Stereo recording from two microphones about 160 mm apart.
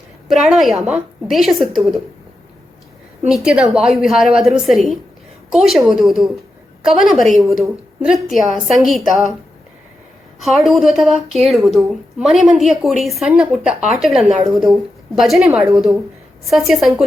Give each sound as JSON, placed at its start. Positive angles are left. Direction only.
{"t": 0.5, "sound": "a woman's voice", "side_deg": 0}
{"t": 3.2, "sound": "a woman's voice", "side_deg": -5}
{"t": 10.4, "sound": "a woman's voice", "side_deg": 0}